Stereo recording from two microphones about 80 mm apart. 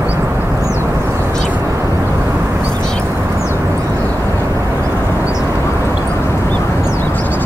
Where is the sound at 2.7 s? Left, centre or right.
Centre.